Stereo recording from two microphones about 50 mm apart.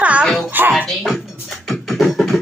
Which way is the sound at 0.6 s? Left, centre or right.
Right.